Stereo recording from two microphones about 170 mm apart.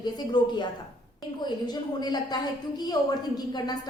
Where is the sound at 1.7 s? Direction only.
25° left (ahead or behind).